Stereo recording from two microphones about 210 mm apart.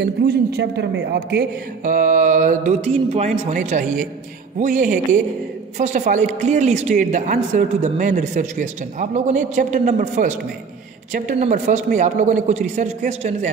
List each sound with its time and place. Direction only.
0.0 s a man's voice: 50° right (ahead or behind)
1.9 s a woman's voice: 40° right (ahead or behind)